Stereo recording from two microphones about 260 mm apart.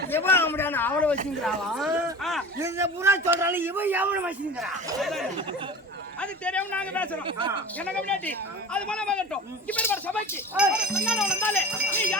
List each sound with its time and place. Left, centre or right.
0.1 s a man's voice: centre
7.3 s speech: centre
7.8 s speech: centre
10.5 s speech: centre